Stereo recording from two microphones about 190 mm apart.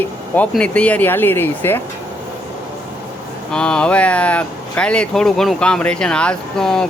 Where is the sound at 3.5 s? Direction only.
5° left (ahead or behind).